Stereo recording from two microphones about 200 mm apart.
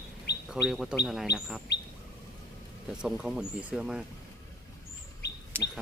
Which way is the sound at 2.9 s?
5° right (ahead or behind).